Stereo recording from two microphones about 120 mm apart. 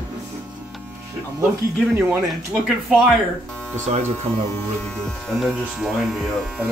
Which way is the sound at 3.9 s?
65° right (ahead or behind).